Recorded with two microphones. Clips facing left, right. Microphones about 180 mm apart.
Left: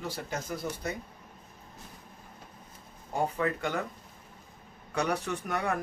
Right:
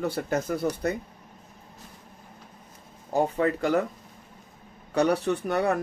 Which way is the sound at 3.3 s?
35° right (ahead or behind).